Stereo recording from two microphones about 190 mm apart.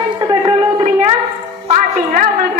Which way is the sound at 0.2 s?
20° right (ahead or behind).